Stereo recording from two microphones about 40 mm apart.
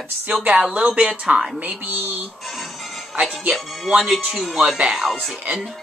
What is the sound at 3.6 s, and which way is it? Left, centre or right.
Speech, centre.